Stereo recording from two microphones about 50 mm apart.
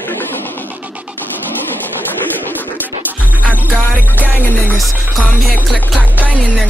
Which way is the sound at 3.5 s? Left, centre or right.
Right.